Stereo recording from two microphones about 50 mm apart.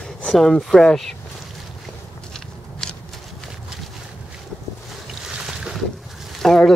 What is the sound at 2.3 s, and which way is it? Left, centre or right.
Walk, centre.